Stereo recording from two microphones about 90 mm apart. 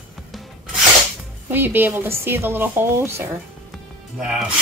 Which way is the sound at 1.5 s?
20° right (ahead or behind).